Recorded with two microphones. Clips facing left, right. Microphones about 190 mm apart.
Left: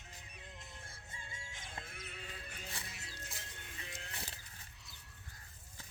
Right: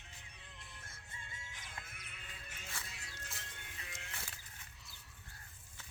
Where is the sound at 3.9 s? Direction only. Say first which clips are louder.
Left 3 dB; 35° left (ahead or behind).